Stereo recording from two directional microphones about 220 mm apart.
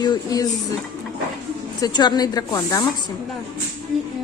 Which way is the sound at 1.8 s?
20° left (ahead or behind).